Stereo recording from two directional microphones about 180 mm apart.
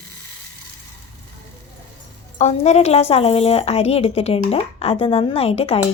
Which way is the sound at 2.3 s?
40° left (ahead or behind).